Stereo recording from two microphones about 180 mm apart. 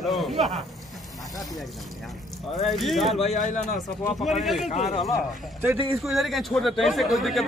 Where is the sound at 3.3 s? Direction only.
45° left (ahead or behind).